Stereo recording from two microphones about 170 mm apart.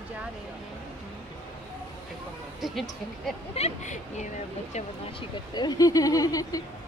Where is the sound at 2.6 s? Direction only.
Centre (ahead or behind).